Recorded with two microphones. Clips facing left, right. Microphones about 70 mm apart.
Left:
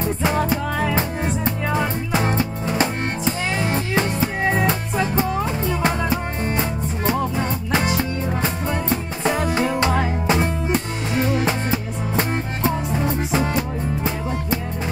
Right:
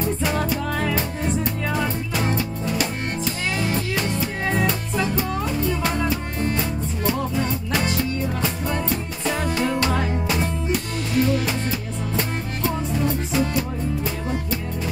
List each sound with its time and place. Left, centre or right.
0.0 s music: left
9.8 s music: left